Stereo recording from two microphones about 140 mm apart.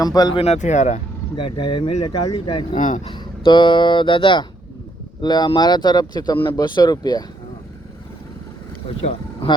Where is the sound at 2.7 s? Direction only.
65° left (ahead or behind).